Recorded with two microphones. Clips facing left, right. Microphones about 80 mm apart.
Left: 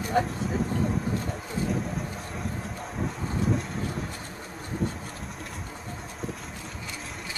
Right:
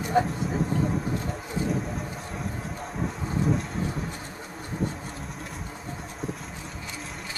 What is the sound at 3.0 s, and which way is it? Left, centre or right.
Thunder, centre.